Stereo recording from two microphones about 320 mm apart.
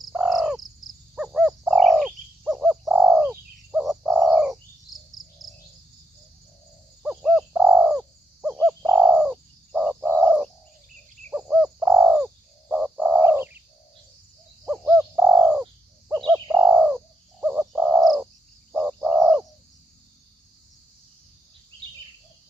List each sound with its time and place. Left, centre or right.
0.0 s bird: centre
7.0 s bird: centre
14.7 s bird: centre